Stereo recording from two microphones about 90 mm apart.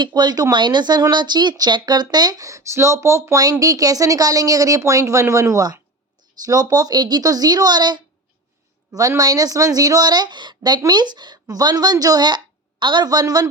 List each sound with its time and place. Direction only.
0.0 s speech: 50° right (ahead or behind)
8.9 s speech: 40° right (ahead or behind)